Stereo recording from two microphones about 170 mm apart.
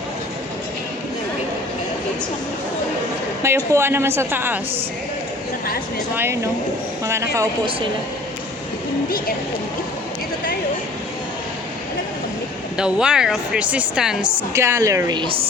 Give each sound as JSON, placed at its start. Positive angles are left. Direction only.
{"t": 3.4, "sound": "a woman's voice", "side_deg": -15}
{"t": 6.1, "sound": "a woman's voice", "side_deg": -15}
{"t": 7.3, "sound": "speech", "side_deg": -30}
{"t": 9.0, "sound": "speech", "side_deg": 60}
{"t": 12.7, "sound": "a woman's voice", "side_deg": -5}
{"t": 14.5, "sound": "a woman's voice", "side_deg": -15}